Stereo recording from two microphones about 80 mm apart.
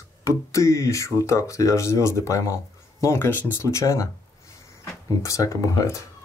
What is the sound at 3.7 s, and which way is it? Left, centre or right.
Speech, left.